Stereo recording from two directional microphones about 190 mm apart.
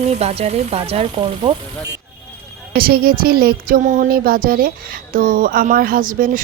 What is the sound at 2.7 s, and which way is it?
Music, 55° right (ahead or behind).